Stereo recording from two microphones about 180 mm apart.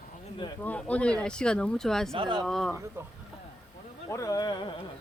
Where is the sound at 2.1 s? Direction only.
25° right (ahead or behind).